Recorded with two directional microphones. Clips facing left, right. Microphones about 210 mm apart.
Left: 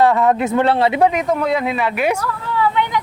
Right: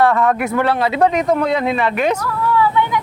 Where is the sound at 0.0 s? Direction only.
15° left (ahead or behind).